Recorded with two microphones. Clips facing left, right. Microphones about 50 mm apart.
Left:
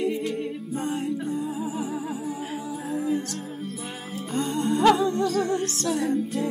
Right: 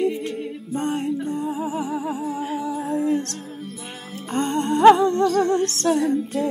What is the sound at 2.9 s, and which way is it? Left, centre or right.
Music, centre.